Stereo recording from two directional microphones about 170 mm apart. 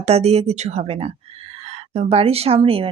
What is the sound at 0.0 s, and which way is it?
Speech, 40° right (ahead or behind).